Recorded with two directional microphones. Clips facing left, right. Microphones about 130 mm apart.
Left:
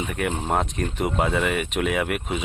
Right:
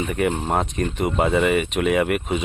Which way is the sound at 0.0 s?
Centre (ahead or behind).